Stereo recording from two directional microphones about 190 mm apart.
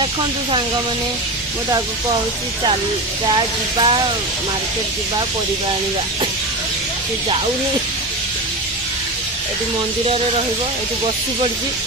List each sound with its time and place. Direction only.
3.3 s speech: 25° right (ahead or behind)